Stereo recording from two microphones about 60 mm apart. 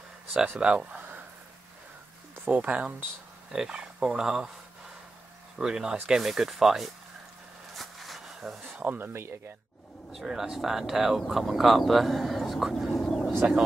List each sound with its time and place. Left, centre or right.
0.6 s speech: centre
2.5 s speech: right
3.5 s speech: centre
5.6 s speech: centre
7.7 s a sound: centre
8.7 s speech: right
10.1 s speech: centre